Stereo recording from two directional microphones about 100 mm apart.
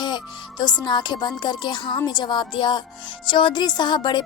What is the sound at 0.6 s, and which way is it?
A woman's voice, 45° left (ahead or behind).